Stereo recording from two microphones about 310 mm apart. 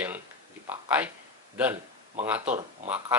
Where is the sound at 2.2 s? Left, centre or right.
Centre.